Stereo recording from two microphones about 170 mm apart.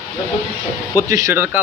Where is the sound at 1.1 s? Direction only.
20° right (ahead or behind).